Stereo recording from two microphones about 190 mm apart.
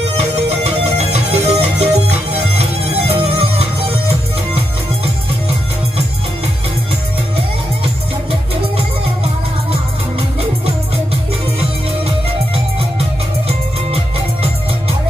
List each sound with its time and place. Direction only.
0.2 s music: 35° right (ahead or behind)
7.8 s music: 30° right (ahead or behind)
13.9 s music: 30° right (ahead or behind)